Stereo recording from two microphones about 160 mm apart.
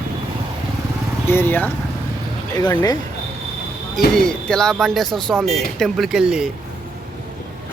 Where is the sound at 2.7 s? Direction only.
25° left (ahead or behind).